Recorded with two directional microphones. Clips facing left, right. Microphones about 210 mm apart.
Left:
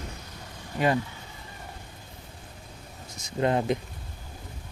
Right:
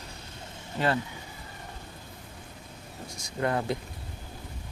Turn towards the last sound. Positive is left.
turn(degrees=20)  # may be behind; listen again after turning